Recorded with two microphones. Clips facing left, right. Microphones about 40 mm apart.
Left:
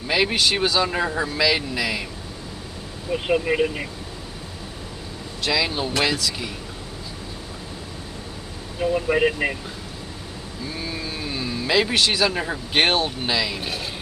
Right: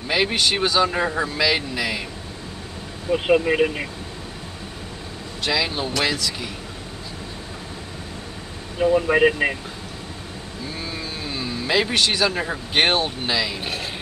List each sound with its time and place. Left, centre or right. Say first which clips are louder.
0.1 s speech: even; centre
3.1 s speech: right 3 dB; right
5.4 s speech: even; centre
8.9 s speech: right 3 dB; right
10.9 s vehicle: left 1 dB; centre
12.7 s speech: even; centre
13.3 s speech: even; centre